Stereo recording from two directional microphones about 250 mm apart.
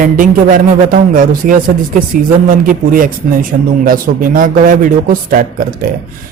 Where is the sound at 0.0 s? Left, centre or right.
Right.